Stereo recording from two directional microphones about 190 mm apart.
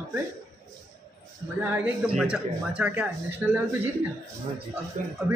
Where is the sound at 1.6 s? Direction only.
10° right (ahead or behind).